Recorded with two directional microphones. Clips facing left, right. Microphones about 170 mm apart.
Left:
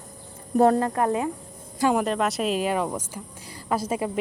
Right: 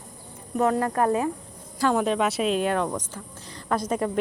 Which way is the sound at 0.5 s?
30° left (ahead or behind).